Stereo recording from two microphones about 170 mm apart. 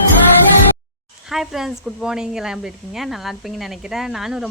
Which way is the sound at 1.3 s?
Centre (ahead or behind).